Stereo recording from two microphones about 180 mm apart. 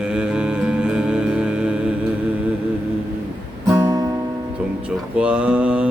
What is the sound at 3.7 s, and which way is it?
Music, 20° right (ahead or behind).